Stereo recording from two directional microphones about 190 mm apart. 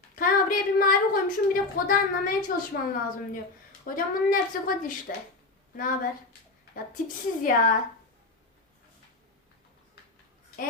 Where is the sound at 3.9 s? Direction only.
45° left (ahead or behind).